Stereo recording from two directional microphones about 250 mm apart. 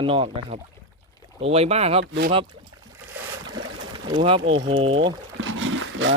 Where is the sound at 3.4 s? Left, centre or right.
Right.